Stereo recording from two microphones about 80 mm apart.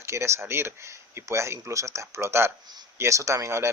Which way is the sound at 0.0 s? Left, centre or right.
Right.